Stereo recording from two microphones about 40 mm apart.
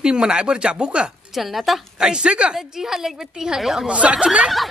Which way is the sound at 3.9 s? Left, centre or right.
Right.